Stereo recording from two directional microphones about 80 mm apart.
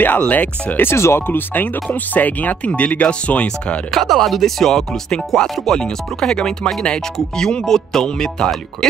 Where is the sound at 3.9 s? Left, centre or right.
Centre.